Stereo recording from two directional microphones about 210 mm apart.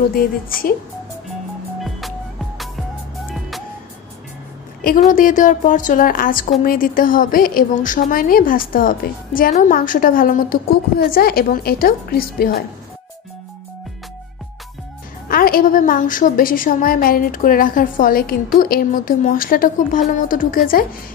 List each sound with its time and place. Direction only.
0.1 s a woman's voice: 45° left (ahead or behind)
2.0 s music: centre (ahead or behind)
4.8 s a woman's voice: 40° left (ahead or behind)
15.2 s a woman's voice: 45° left (ahead or behind)